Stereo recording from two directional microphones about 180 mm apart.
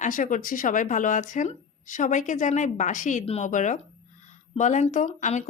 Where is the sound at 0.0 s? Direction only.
45° left (ahead or behind).